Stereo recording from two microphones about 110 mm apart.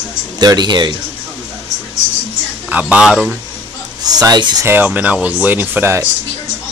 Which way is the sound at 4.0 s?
35° right (ahead or behind).